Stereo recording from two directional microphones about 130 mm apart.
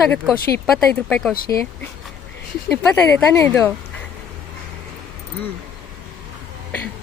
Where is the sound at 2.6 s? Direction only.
20° left (ahead or behind).